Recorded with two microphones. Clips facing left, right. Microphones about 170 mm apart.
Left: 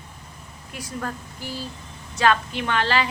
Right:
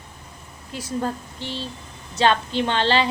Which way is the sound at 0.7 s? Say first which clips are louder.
Right 5 dB; 25° right (ahead or behind).